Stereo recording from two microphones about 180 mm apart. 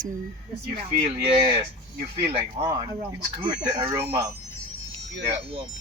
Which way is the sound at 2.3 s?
30° right (ahead or behind).